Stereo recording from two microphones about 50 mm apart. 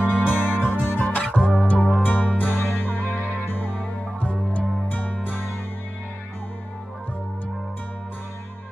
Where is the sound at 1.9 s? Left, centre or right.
Left.